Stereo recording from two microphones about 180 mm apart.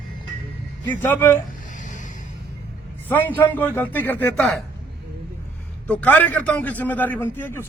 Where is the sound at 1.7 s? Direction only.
45° left (ahead or behind).